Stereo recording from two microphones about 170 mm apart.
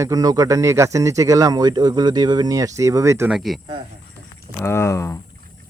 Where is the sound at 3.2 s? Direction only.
Centre (ahead or behind).